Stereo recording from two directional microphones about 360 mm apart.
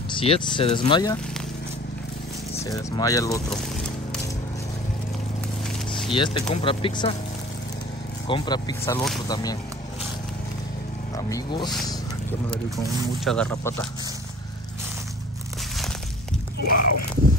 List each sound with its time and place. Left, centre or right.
0.1 s speech: centre
2.6 s speech: centre
6.1 s speech: centre
8.3 s speech: centre
11.1 s speech: centre
12.8 s speech: centre
16.7 s speech: left